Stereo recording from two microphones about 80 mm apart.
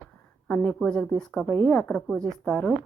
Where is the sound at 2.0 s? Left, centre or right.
Centre.